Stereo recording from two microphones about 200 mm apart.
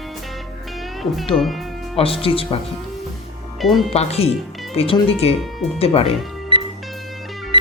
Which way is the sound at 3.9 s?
30° left (ahead or behind).